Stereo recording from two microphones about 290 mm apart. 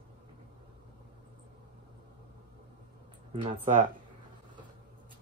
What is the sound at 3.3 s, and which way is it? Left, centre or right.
Speech, centre.